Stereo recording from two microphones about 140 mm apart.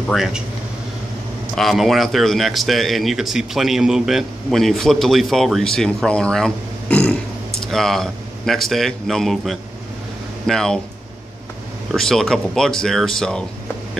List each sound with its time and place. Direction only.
0.1 s speech: centre (ahead or behind)
1.5 s speech: centre (ahead or behind)
11.9 s speech: 5° left (ahead or behind)